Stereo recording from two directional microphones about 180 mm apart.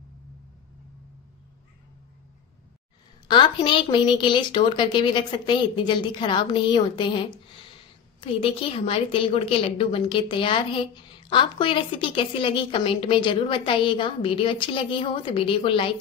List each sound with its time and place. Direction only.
3.3 s a woman's voice: 25° left (ahead or behind)